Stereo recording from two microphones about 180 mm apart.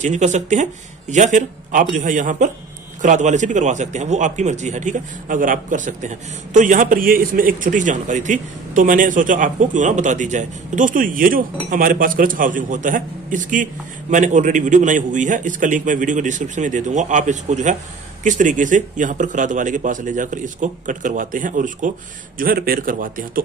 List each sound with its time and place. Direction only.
0.0 s a man's voice: 40° right (ahead or behind)